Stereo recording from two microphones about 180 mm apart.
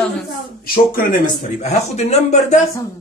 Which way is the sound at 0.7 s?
50° left (ahead or behind).